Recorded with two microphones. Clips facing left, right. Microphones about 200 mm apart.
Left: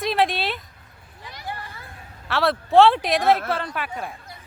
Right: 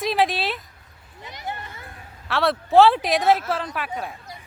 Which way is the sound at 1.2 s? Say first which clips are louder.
Right 1 dB; 20° right (ahead or behind).